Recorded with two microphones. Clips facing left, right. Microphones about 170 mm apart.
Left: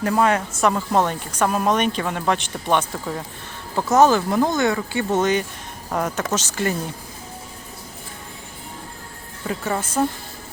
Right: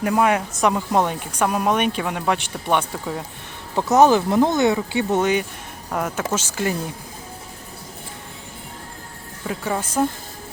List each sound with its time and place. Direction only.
0.0 s speech: 15° right (ahead or behind)
9.5 s speech: 5° right (ahead or behind)